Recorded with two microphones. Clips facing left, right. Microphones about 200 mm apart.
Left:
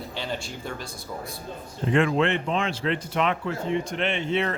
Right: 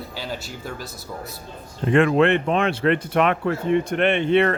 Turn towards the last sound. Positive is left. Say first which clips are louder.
# right 8 dB
turn(degrees=-60)  # may be behind; listen again after turning